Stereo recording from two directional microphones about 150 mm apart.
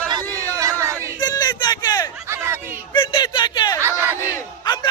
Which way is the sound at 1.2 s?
25° left (ahead or behind).